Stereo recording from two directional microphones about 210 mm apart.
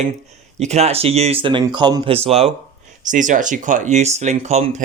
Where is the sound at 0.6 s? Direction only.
30° right (ahead or behind).